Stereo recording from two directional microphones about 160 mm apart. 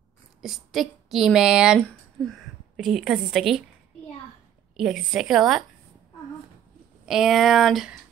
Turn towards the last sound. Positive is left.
turn(degrees=0)  # may be behind; listen again after turning